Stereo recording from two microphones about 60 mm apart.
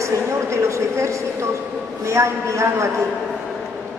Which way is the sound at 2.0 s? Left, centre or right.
Right.